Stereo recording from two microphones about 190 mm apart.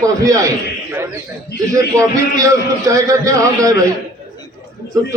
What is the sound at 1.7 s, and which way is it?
A man's voice, 15° right (ahead or behind).